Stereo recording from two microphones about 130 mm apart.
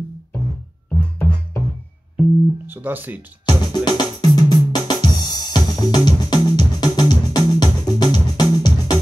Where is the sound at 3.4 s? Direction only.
35° left (ahead or behind).